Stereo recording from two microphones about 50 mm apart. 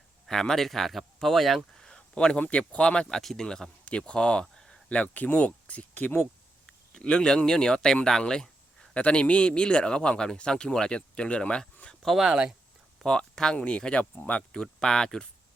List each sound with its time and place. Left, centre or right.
0.3 s speech: centre
1.8 s a sound: centre
2.5 s speech: left
3.2 s speech: centre
3.4 s speech: centre
4.9 s speech: left
6.7 s speech: centre
8.2 s a sound: centre
9.0 s speech: left
12.0 s speech: centre
13.1 s speech: centre
14.6 s speech: centre